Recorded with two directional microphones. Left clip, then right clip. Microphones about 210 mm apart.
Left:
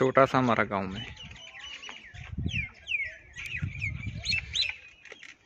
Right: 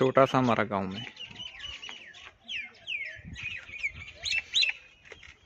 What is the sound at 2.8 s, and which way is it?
Bird, 50° right (ahead or behind).